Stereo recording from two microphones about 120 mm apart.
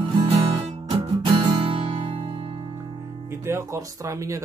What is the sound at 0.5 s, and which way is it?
Music, 55° right (ahead or behind).